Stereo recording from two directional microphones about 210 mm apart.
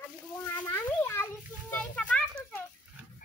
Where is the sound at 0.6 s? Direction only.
15° left (ahead or behind).